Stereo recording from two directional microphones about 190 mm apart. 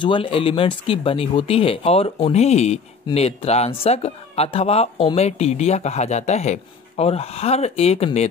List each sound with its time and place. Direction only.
0.0 s speech: 25° left (ahead or behind)